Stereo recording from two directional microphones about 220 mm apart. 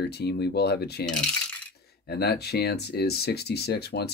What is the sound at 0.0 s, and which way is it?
Speech, 45° left (ahead or behind).